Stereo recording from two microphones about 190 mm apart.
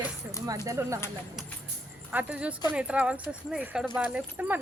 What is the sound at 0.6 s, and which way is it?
Speech, 15° right (ahead or behind).